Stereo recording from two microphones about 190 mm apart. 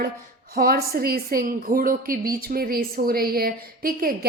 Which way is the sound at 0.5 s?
50° right (ahead or behind).